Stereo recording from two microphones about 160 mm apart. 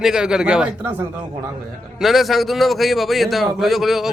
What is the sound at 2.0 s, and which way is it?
A man's voice, centre (ahead or behind).